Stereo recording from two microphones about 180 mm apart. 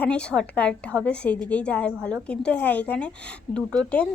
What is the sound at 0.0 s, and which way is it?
A woman's voice, 5° left (ahead or behind).